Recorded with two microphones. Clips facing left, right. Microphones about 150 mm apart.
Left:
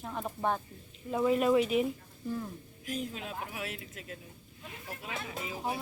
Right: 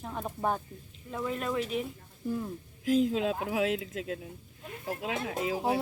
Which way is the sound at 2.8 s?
90° right.